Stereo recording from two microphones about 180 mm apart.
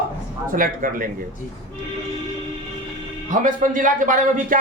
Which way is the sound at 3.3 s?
50° right (ahead or behind).